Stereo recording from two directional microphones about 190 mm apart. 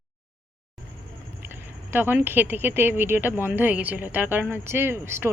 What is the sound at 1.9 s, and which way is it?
Speech, 10° right (ahead or behind).